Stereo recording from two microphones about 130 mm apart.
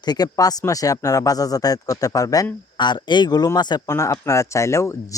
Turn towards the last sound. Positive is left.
turn(degrees=20)  # may be behind; listen again after turning